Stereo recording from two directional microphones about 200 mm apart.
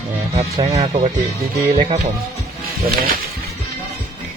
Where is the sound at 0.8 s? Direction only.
30° right (ahead or behind).